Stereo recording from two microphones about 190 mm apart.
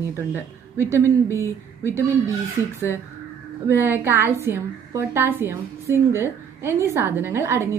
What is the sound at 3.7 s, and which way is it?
A woman's voice, 10° right (ahead or behind).